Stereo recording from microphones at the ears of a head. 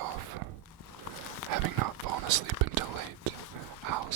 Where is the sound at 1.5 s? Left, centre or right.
Right.